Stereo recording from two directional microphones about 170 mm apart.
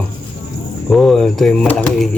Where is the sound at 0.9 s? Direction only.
Centre (ahead or behind).